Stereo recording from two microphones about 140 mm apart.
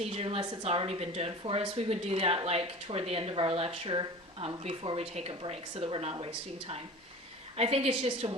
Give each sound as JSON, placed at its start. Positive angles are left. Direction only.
{"t": 0.0, "sound": "a woman's voice", "side_deg": -45}